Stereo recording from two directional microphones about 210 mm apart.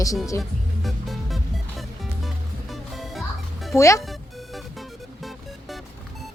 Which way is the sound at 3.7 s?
15° left (ahead or behind).